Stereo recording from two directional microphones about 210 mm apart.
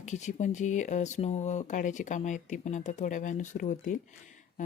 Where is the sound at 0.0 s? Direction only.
35° left (ahead or behind).